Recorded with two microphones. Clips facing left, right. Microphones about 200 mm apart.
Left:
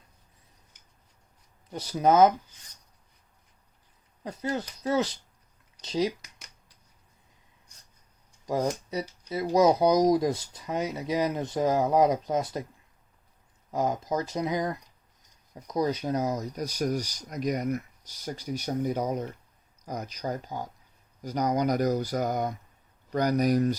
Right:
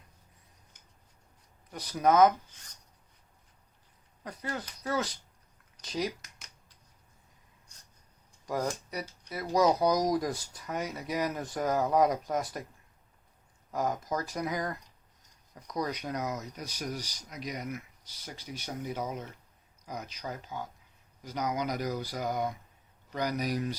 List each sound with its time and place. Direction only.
1.7 s speech: 25° left (ahead or behind)
4.2 s speech: 25° left (ahead or behind)
8.4 s speech: 25° left (ahead or behind)
13.7 s speech: 25° left (ahead or behind); by 23.7 s 45° left (ahead or behind)